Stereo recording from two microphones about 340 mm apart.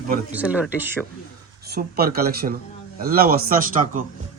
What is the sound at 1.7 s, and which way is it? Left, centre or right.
A man's voice, right.